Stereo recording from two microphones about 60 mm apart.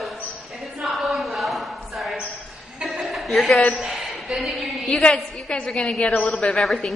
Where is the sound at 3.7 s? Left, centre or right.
Centre.